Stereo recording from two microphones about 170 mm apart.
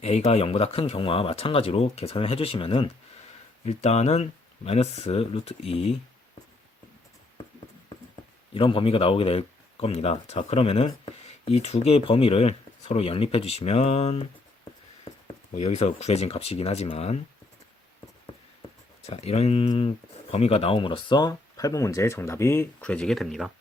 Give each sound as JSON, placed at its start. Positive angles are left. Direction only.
{"t": 0.0, "sound": "speech", "side_deg": 35}
{"t": 8.5, "sound": "speech", "side_deg": 30}
{"t": 15.5, "sound": "speech", "side_deg": 40}
{"t": 19.0, "sound": "speech", "side_deg": 40}